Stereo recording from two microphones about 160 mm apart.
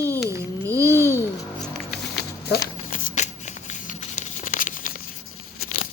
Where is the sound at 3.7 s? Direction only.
50° left (ahead or behind).